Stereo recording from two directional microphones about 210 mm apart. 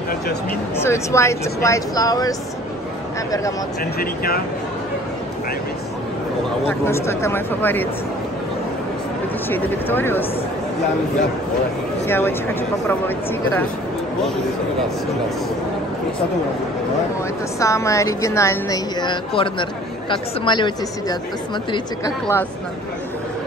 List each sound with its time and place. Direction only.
0.7 s a woman's voice: 15° left (ahead or behind)
4.0 s speech: 45° left (ahead or behind)
6.7 s a woman's voice: 10° left (ahead or behind)
9.5 s a woman's voice: 10° left (ahead or behind)
12.1 s a woman's voice: 10° left (ahead or behind)
17.6 s a woman's voice: 15° left (ahead or behind)